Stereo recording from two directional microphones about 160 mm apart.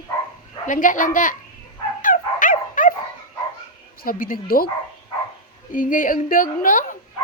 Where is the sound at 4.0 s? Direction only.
60° left (ahead or behind).